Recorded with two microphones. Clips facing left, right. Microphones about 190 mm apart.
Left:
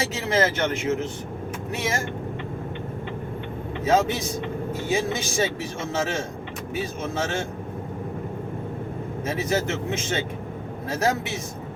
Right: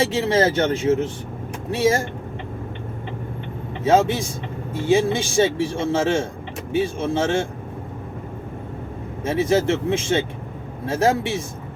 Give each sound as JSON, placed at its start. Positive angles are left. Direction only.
{"t": 0.0, "sound": "speech", "side_deg": -30}
{"t": 3.8, "sound": "a man's voice", "side_deg": -30}
{"t": 9.2, "sound": "a man's voice", "side_deg": -30}